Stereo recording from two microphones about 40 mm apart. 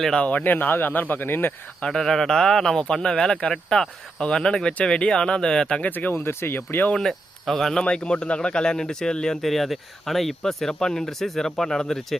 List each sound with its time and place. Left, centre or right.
0.3 s speech: left
1.8 s speech: centre
5.8 s speech: left
6.2 s speech: left
6.9 s speech: centre
7.9 s speech: left
9.4 s speech: centre
10.4 s speech: centre